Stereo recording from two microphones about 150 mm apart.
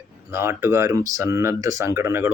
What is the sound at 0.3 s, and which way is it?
Speech, 15° right (ahead or behind).